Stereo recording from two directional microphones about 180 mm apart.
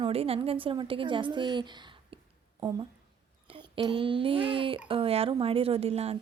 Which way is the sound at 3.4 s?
30° right (ahead or behind).